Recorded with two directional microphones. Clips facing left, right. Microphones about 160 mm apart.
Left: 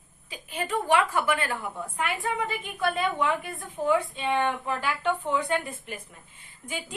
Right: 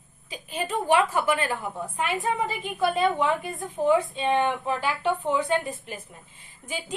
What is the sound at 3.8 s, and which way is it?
A woman's voice, 25° right (ahead or behind).